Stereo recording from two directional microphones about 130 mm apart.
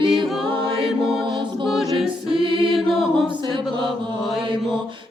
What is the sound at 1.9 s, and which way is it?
Choir, 40° right (ahead or behind).